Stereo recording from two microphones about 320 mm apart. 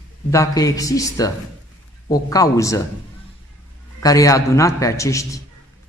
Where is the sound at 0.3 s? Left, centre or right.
Centre.